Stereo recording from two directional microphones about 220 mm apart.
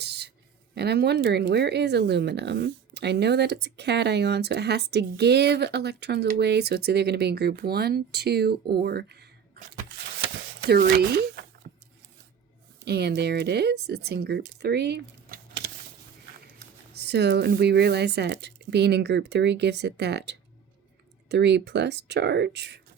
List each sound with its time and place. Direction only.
0.0 s a sound: 50° right (ahead or behind)
0.7 s speech: 45° right (ahead or behind)
10.6 s speech: 45° right (ahead or behind)
12.8 s speech: 45° right (ahead or behind)